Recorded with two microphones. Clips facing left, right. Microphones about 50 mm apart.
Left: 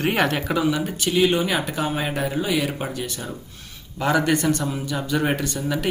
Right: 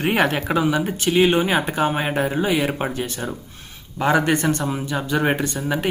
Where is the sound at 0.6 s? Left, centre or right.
Right.